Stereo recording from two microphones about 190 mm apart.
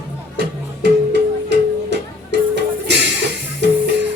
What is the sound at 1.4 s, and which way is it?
Music, 65° right (ahead or behind).